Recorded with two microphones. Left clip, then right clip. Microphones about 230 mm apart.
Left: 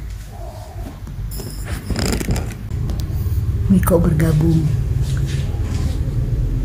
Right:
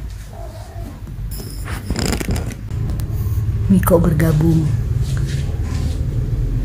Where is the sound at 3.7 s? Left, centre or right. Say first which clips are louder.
Right 2 dB; centre.